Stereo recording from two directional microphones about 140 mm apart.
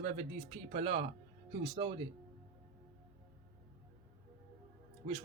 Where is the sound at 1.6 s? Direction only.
35° right (ahead or behind).